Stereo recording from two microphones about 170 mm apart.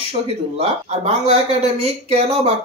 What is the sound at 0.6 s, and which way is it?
Speech, 35° right (ahead or behind).